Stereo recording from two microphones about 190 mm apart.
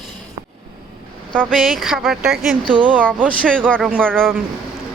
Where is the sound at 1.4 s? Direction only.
5° right (ahead or behind).